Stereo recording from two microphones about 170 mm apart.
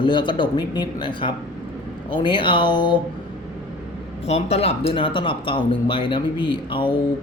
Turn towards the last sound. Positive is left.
turn(degrees=30)  # may be behind; listen again after turning